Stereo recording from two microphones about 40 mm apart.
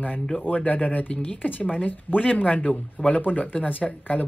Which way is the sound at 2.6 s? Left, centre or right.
Left.